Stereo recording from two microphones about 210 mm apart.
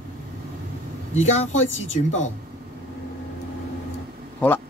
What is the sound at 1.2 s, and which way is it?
Speech, 35° left (ahead or behind).